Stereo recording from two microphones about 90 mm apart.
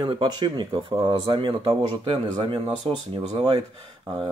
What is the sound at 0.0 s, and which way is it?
Speech, 60° right (ahead or behind).